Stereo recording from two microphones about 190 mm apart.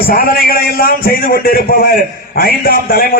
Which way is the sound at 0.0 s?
50° left (ahead or behind).